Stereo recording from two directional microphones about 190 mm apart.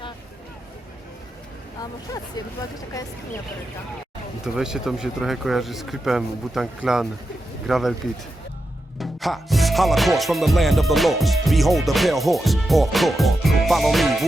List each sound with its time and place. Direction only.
1.8 s speech: 20° left (ahead or behind)
4.4 s music: 5° right (ahead or behind)
9.0 s music: centre (ahead or behind)